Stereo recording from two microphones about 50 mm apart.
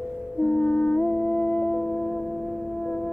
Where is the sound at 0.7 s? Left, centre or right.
Left.